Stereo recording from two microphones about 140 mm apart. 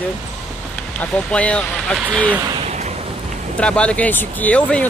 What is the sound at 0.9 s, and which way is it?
Speech, 10° left (ahead or behind).